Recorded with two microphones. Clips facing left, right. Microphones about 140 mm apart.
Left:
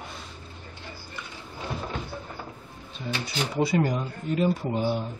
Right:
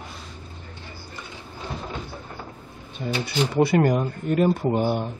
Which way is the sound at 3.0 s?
55° right (ahead or behind).